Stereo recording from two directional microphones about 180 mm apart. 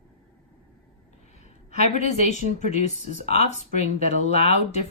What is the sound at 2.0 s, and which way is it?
Speech, 40° left (ahead or behind).